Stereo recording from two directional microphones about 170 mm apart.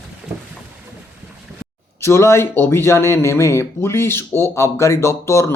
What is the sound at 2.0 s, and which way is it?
Speech, 15° left (ahead or behind).